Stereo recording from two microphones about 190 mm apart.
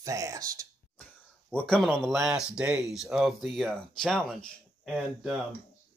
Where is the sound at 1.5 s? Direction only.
5° left (ahead or behind).